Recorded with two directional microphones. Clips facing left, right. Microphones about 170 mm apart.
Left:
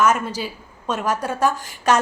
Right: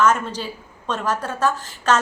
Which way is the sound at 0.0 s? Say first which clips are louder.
Even; 10° left (ahead or behind).